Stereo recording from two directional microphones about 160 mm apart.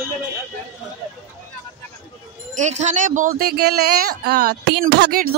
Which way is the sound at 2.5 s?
45° right (ahead or behind).